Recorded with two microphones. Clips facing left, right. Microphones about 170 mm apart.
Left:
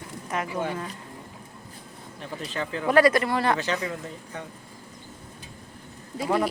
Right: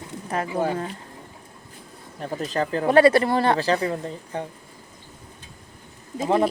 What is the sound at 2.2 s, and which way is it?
Speech, 40° right (ahead or behind).